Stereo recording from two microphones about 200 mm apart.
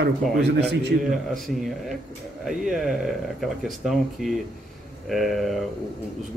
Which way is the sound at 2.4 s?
Centre (ahead or behind).